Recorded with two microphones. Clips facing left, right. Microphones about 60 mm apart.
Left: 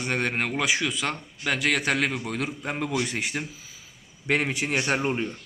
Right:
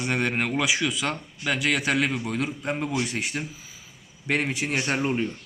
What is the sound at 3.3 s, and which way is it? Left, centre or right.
Speech, centre.